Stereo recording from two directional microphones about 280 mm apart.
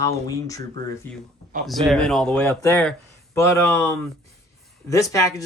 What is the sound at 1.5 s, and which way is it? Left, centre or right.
Speech, right.